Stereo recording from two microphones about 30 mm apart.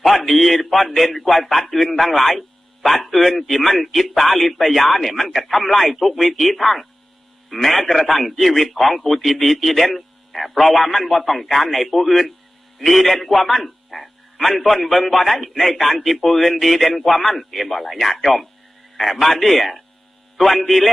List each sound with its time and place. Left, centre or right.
0.0 s a man's voice: centre